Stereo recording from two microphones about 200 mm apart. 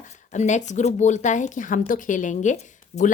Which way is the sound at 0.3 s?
35° left (ahead or behind).